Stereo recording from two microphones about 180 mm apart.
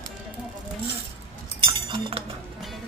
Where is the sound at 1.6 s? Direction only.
30° right (ahead or behind).